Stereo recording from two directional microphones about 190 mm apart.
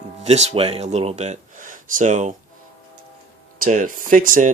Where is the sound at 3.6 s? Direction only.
45° right (ahead or behind).